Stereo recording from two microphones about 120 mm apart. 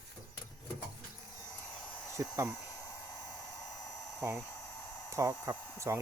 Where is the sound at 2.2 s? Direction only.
25° right (ahead or behind).